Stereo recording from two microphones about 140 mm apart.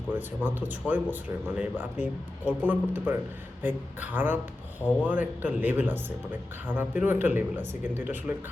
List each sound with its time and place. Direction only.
0.1 s speech: 15° right (ahead or behind)